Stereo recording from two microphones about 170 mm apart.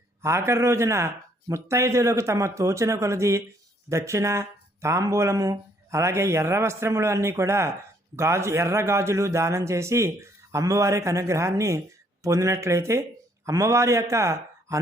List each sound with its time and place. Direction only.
0.2 s a man's voice: 15° right (ahead or behind)